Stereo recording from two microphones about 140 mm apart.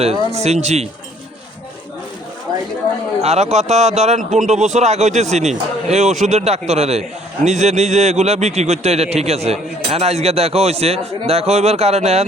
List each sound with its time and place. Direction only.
0.3 s a man's voice: 50° right (ahead or behind)
3.2 s a man's voice: 50° right (ahead or behind)